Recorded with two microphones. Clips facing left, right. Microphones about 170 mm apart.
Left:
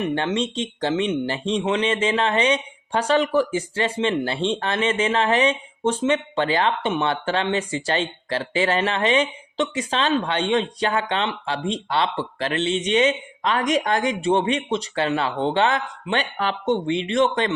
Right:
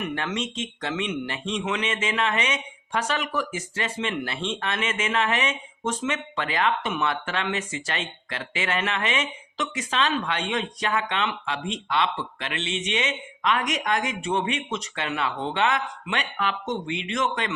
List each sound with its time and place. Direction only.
0.0 s speech: 30° left (ahead or behind)